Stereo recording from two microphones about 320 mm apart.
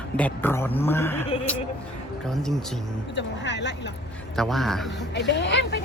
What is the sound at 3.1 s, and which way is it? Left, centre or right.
Speech, left.